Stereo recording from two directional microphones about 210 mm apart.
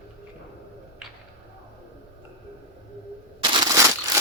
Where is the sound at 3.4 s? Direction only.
20° right (ahead or behind).